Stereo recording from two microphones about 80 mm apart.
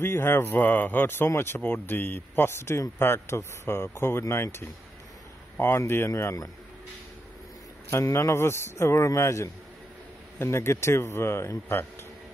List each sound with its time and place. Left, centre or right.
0.0 s speech: left
7.9 s speech: left